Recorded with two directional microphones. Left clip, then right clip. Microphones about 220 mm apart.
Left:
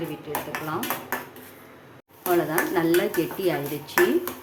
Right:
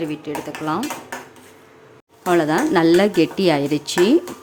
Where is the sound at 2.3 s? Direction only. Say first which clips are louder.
Right 6 dB; 45° right (ahead or behind).